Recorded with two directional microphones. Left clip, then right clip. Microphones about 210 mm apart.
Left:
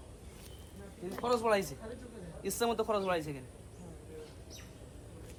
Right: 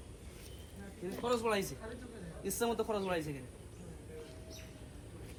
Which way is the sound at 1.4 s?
30° left (ahead or behind).